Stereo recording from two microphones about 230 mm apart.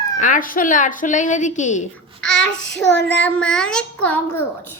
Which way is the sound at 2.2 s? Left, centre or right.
Left.